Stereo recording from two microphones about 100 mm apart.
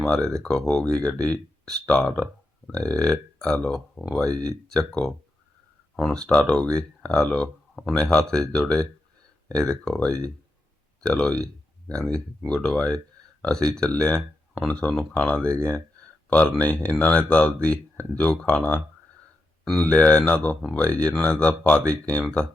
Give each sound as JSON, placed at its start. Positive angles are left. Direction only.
{"t": 0.0, "sound": "speech", "side_deg": 5}
{"t": 19.8, "sound": "speech", "side_deg": 15}